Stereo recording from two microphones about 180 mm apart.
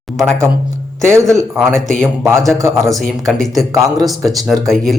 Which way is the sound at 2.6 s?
15° right (ahead or behind).